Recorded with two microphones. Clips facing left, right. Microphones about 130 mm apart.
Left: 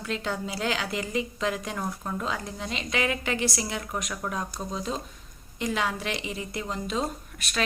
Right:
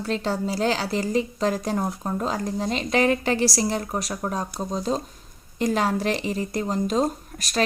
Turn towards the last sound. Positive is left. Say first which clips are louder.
# right 6 dB
turn(degrees=-40)  # may be behind; listen again after turning